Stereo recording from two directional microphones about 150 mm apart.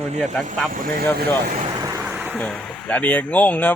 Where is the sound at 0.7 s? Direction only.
75° right (ahead or behind).